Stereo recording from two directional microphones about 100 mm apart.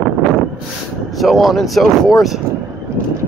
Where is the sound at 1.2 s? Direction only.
Centre (ahead or behind).